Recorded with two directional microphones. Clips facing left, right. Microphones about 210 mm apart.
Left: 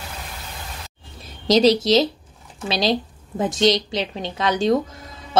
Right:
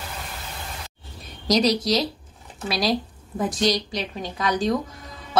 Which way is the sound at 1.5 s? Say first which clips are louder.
Left 5 dB; 25° left (ahead or behind).